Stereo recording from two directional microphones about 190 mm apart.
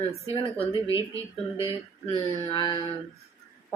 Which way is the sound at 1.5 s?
30° left (ahead or behind).